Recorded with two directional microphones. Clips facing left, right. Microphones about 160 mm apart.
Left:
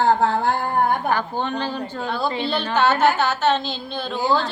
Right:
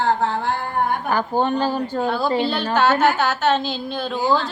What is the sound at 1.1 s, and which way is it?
Speech, 45° right (ahead or behind).